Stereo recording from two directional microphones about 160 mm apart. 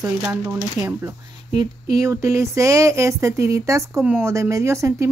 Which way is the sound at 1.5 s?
25° right (ahead or behind).